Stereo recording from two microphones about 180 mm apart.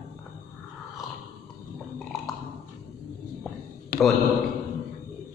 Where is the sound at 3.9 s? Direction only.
55° left (ahead or behind).